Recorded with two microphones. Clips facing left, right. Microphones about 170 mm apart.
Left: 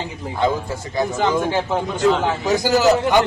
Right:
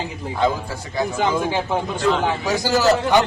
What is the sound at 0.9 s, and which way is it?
Speech, 5° right (ahead or behind).